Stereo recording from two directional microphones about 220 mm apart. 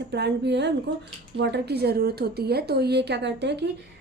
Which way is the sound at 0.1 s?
50° right (ahead or behind).